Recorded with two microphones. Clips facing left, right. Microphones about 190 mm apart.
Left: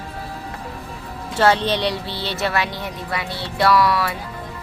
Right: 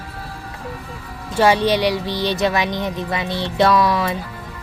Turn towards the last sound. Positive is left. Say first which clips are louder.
# right 1 dB
turn(degrees=-20)  # may be behind; listen again after turning